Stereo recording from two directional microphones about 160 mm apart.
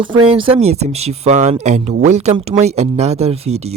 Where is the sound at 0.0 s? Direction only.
35° right (ahead or behind).